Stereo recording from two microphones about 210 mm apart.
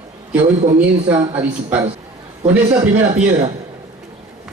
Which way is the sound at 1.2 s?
20° right (ahead or behind).